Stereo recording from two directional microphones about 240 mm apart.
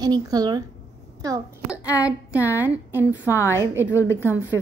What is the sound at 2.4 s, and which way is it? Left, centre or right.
Speech, centre.